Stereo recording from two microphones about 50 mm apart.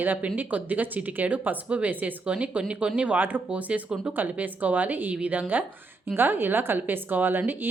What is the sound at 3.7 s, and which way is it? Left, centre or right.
Speech, right.